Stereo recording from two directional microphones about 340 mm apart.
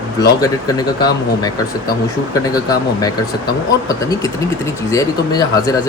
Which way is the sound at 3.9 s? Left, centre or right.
Centre.